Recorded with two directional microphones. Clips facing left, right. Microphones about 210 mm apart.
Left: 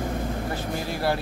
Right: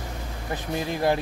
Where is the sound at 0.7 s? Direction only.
20° right (ahead or behind).